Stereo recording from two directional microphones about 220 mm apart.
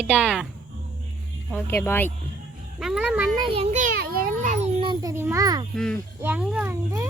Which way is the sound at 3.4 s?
25° right (ahead or behind).